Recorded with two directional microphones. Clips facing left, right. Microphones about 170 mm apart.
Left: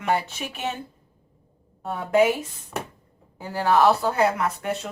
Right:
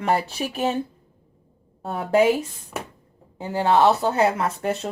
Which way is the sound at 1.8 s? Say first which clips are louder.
Right 1 dB; 30° right (ahead or behind).